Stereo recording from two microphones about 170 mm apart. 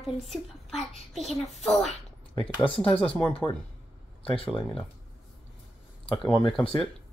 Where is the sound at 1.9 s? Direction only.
35° left (ahead or behind).